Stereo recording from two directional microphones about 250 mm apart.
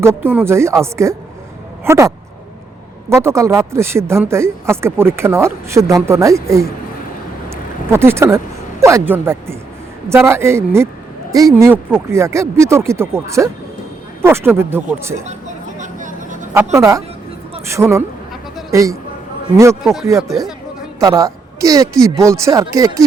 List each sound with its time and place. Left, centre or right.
0.0 s speech: centre
7.5 s a sound: centre
8.8 s speech: centre
15.8 s vehicle: right
16.7 s speech: centre
21.0 s a woman's voice: centre